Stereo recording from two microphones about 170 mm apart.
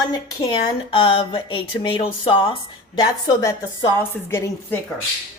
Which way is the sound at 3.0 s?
20° left (ahead or behind).